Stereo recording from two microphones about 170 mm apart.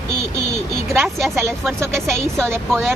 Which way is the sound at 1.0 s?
Centre (ahead or behind).